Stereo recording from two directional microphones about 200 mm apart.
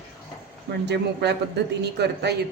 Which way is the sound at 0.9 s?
55° right (ahead or behind).